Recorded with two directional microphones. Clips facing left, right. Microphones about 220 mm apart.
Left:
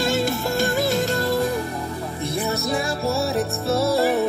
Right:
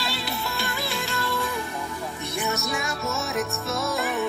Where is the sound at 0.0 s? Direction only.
45° left (ahead or behind).